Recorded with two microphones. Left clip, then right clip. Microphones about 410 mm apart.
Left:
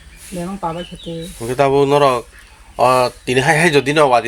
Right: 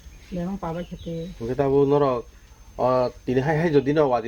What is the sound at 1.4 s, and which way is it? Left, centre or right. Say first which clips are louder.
Speech: left 7 dB; right.